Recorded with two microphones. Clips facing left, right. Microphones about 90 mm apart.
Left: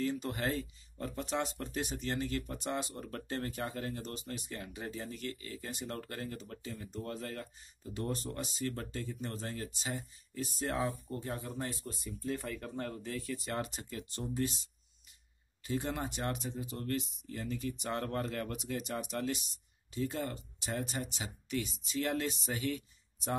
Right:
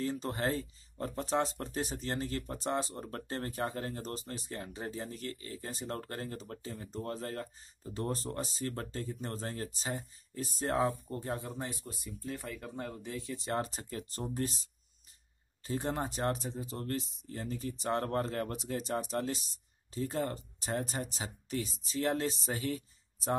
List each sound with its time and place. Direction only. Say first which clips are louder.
0.0 s speech: right 1 dB; 35° right (ahead or behind)
11.8 s speech: left 2 dB; 5° right (ahead or behind); by 23.3 s 35° right (ahead or behind)